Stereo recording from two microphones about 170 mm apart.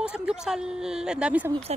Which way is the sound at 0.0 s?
5° right (ahead or behind).